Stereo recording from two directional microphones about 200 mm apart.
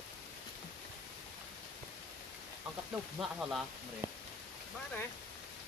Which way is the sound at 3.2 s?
5° right (ahead or behind).